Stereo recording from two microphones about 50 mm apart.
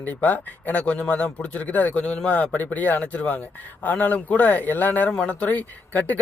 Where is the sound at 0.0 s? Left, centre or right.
Left.